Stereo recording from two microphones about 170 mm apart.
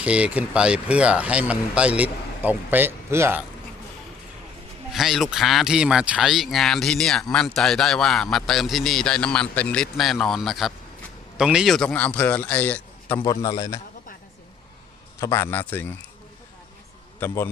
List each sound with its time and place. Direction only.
0.0 s speech: 5° right (ahead or behind)
4.9 s a man's voice: centre (ahead or behind)
13.4 s a man's voice: 20° left (ahead or behind)
15.2 s a man's voice: 15° left (ahead or behind)
17.2 s a man's voice: 15° left (ahead or behind)